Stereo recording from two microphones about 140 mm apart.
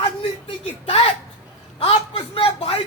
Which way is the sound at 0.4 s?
40° left (ahead or behind).